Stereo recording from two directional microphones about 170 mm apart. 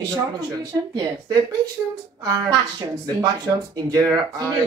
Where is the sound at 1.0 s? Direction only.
25° right (ahead or behind).